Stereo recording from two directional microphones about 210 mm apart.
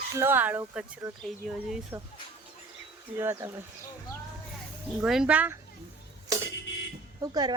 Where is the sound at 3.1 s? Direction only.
10° right (ahead or behind).